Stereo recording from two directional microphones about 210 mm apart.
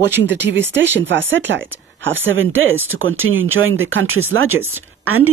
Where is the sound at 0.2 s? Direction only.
55° right (ahead or behind); by 4.6 s 75° right (ahead or behind).